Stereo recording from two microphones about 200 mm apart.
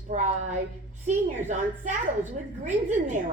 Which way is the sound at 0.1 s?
35° right (ahead or behind).